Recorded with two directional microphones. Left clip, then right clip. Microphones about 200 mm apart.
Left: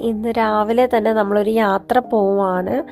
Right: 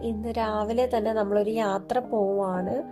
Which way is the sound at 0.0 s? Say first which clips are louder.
Left 10 dB; 30° left (ahead or behind).